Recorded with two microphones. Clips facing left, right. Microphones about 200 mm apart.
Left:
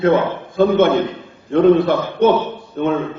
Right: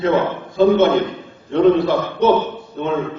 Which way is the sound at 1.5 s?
50° left (ahead or behind).